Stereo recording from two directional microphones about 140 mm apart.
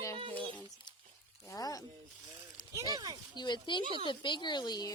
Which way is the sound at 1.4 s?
25° left (ahead or behind).